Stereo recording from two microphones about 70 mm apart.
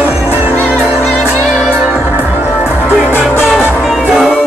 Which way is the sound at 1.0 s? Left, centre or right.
Centre.